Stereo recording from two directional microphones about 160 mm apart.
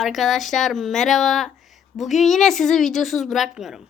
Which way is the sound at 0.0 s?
Centre (ahead or behind).